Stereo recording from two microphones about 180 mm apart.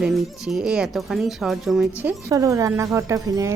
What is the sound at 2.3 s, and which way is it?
Speech, 15° right (ahead or behind).